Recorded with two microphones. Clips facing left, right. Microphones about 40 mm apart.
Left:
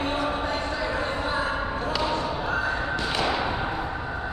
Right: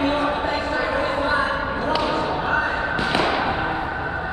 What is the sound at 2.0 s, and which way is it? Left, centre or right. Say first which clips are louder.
Basketball bounce: right 5 dB; right.